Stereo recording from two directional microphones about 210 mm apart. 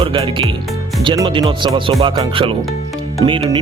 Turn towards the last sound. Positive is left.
turn(degrees=-25)  # may be behind; listen again after turning